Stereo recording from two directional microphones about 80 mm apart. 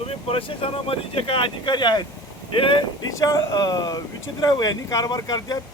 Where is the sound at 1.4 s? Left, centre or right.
Left.